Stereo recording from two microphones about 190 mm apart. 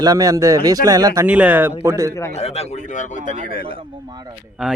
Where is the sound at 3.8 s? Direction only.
25° right (ahead or behind).